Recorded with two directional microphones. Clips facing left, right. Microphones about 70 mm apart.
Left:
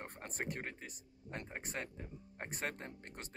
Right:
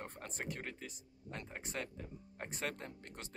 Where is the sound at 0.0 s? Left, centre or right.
Left.